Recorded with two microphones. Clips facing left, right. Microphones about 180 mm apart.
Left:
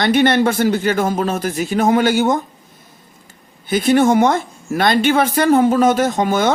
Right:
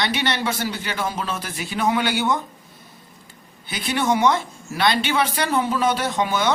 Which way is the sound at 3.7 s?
45° left (ahead or behind).